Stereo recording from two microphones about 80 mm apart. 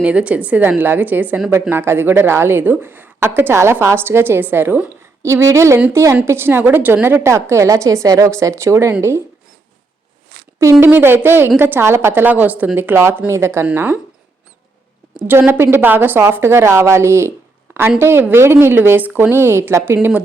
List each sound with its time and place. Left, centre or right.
0.0 s a woman's voice: centre; by 9.2 s right
10.6 s speech: right
10.8 s a woman's voice: right
15.1 s a woman's voice: right